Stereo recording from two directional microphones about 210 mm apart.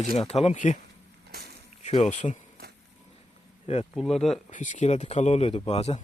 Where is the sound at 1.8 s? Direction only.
35° left (ahead or behind).